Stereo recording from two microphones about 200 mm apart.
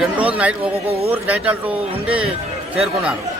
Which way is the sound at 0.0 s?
5° right (ahead or behind).